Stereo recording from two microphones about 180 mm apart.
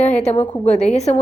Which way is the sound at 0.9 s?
40° left (ahead or behind).